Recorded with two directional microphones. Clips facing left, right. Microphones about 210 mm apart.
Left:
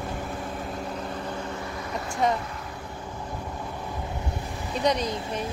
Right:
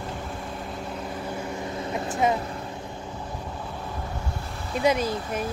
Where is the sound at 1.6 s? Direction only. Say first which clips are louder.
Right 3 dB; 20° right (ahead or behind).